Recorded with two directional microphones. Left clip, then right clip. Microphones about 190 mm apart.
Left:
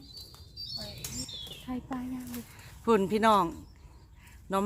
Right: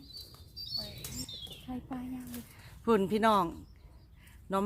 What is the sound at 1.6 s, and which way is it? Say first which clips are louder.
Speech: left 5 dB; 45° left (ahead or behind).